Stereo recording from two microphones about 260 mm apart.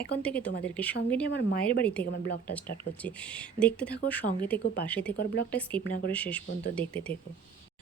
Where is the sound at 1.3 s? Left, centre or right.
Left.